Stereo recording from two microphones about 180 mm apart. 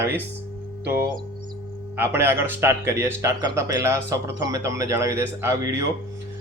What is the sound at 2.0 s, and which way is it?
Speech, 10° right (ahead or behind).